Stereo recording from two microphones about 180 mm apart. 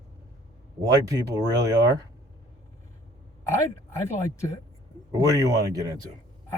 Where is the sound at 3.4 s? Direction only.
15° left (ahead or behind).